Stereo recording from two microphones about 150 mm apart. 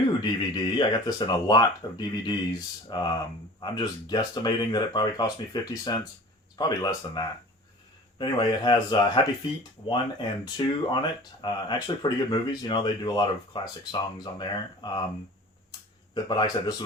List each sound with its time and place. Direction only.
0.2 s speech: 30° left (ahead or behind)
16.1 s speech: 30° left (ahead or behind)